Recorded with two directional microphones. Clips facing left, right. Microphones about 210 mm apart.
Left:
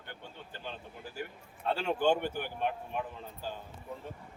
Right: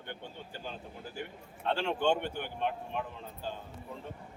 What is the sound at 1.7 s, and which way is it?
A man's voice, 5° left (ahead or behind).